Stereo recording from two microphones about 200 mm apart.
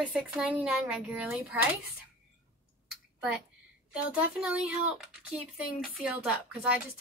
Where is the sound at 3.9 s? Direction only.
5° right (ahead or behind).